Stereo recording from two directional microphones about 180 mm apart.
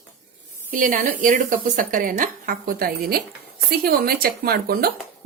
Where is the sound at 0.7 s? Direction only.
45° right (ahead or behind).